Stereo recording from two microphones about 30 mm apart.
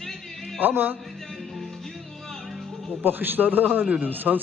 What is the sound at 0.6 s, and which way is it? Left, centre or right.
Speech, right.